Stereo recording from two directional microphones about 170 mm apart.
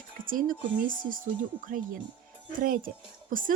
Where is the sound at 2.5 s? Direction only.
55° right (ahead or behind).